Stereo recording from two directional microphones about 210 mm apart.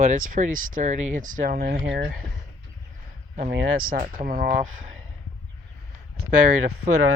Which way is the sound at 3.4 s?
45° right (ahead or behind).